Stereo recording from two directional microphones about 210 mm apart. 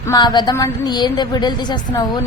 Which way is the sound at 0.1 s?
20° left (ahead or behind).